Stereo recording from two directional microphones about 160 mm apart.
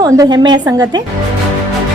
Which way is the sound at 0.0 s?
25° right (ahead or behind).